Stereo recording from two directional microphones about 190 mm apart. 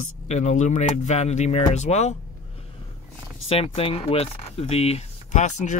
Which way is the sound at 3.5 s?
30° left (ahead or behind).